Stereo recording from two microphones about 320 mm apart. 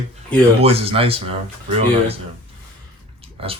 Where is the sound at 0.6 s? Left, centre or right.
Centre.